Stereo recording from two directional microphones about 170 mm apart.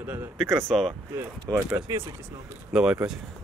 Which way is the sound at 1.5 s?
10° right (ahead or behind).